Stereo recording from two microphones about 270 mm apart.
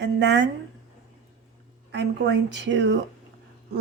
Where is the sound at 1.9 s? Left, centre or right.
Right.